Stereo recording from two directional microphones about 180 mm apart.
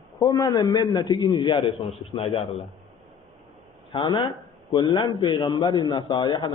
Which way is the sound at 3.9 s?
25° left (ahead or behind).